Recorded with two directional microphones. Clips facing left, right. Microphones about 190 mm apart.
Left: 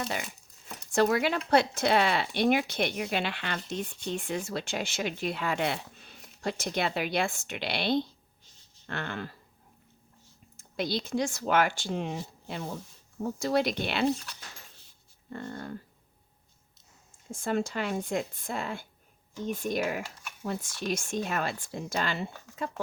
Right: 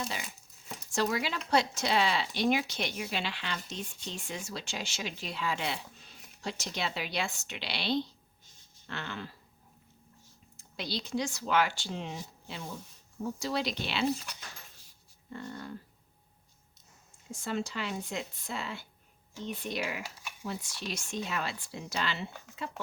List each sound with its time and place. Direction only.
0.0 s speech: 55° left (ahead or behind)
10.6 s speech: 50° left (ahead or behind)
15.3 s speech: 50° left (ahead or behind)
17.3 s speech: 50° left (ahead or behind)